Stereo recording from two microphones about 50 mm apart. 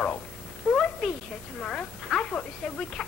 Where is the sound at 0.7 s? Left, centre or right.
Centre.